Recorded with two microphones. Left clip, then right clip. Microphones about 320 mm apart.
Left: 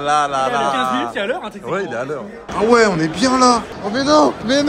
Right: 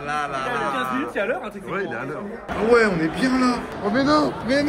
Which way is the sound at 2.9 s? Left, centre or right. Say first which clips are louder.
Left 6 dB; centre.